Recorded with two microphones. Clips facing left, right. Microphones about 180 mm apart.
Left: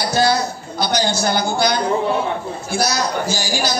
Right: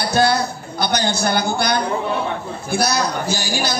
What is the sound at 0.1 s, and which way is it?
A man's voice, 60° right (ahead or behind).